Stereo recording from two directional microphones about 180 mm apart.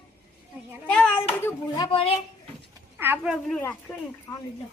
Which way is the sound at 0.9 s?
5° left (ahead or behind).